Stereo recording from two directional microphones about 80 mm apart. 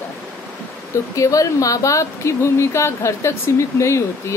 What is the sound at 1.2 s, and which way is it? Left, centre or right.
Speech, left.